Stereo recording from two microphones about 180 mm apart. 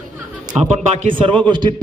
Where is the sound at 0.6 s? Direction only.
40° right (ahead or behind).